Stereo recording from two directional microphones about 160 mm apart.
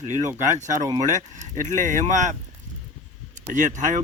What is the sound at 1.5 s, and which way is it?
Speech, 55° right (ahead or behind).